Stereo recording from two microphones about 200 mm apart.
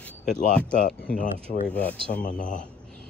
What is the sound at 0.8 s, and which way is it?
Speech, 45° left (ahead or behind).